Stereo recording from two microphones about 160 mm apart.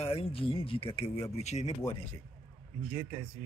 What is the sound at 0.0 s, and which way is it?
Speech, 35° left (ahead or behind).